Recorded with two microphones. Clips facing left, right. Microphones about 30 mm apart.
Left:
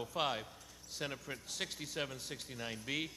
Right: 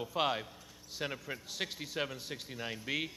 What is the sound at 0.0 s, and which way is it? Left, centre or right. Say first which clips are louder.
Speech: right 4 dB; centre.